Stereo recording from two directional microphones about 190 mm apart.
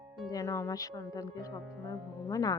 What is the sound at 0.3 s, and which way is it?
Speech, 15° left (ahead or behind).